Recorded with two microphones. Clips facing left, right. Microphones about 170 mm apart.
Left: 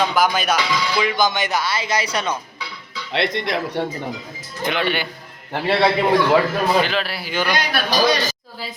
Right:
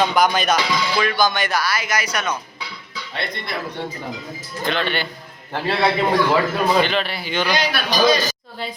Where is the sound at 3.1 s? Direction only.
90° left.